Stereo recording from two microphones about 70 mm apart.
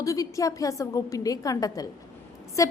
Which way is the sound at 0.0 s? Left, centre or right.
Left.